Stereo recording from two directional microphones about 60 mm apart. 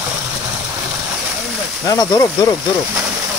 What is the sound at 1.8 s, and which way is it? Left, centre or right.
Speech, left.